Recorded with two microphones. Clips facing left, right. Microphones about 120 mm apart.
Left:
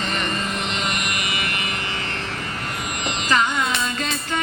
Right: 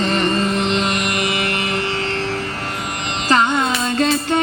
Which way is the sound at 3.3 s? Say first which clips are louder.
Right 5 dB; 30° right (ahead or behind).